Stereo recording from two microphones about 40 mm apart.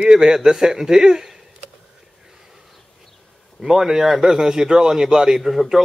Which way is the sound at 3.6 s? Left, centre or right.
Centre.